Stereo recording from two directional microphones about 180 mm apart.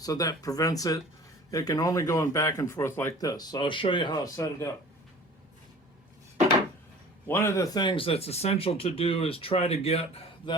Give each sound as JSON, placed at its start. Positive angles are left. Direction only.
{"t": 0.0, "sound": "speech", "side_deg": 20}
{"t": 7.3, "sound": "speech", "side_deg": 15}